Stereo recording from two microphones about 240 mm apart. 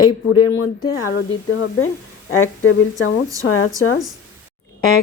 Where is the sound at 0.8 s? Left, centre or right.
Left.